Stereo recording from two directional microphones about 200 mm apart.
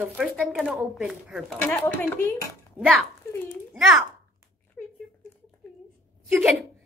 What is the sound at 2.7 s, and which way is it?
Speech, 5° right (ahead or behind).